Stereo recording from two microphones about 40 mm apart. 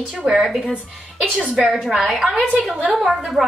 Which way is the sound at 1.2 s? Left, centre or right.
Right.